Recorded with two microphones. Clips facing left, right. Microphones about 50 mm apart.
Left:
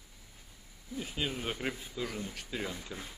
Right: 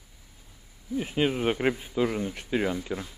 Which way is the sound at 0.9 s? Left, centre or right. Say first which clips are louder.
Right 10 dB; right.